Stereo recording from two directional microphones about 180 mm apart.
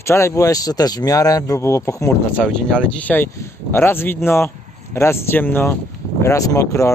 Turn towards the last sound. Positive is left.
turn(degrees=15)  # may be behind; listen again after turning